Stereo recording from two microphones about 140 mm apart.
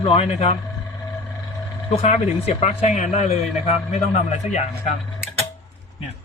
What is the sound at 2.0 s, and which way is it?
Speech, 45° left (ahead or behind).